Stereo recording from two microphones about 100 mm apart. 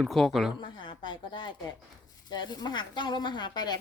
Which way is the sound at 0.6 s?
50° left (ahead or behind).